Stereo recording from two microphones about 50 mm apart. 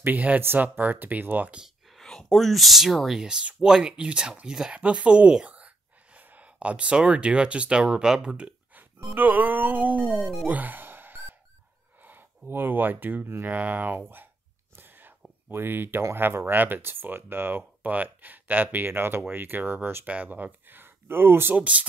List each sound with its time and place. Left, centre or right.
0.0 s speech: right
2.0 s speech: centre
3.2 s speech: centre
9.1 s speech: right
10.0 s speech: centre
10.5 s music: right
12.0 s speech: right
13.5 s speech: right
14.8 s whispering: right
15.5 s speech: right
20.1 s speech: right
21.5 s speech: right